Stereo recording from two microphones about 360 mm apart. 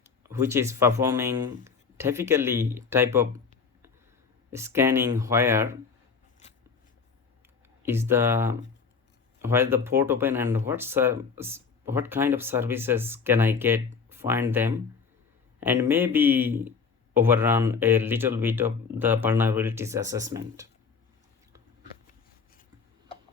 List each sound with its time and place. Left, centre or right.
0.0 s speech: centre
4.5 s speech: centre
6.4 s scissors: centre
7.8 s speech: centre